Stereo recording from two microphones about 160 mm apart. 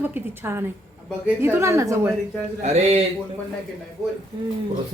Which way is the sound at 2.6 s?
45° right (ahead or behind).